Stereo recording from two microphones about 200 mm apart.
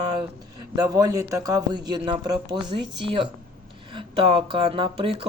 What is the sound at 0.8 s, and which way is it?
A man's voice, 15° right (ahead or behind).